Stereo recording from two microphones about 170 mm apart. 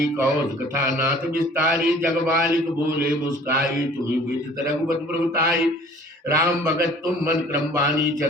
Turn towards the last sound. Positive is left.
turn(degrees=-15)  # may be behind; listen again after turning